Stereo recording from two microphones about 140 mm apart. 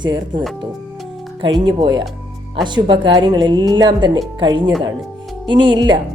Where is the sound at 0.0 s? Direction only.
35° right (ahead or behind).